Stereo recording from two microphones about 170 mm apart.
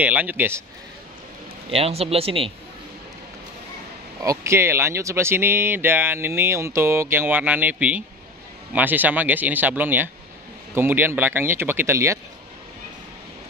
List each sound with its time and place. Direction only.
0.0 s speech: 10° right (ahead or behind)
1.7 s speech: 35° right (ahead or behind)
4.2 s speech: 15° right (ahead or behind)